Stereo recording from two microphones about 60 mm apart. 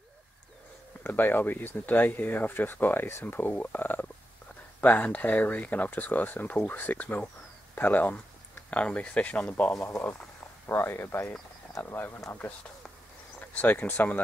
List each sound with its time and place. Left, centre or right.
1.0 s speech: left
9.8 s speech: left
13.6 s speech: left